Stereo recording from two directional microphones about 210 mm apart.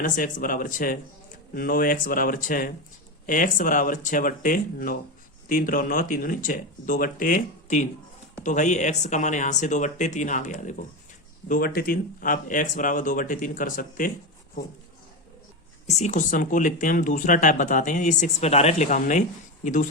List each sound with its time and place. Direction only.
0.0 s speech: 40° left (ahead or behind)
15.9 s speech: 35° left (ahead or behind)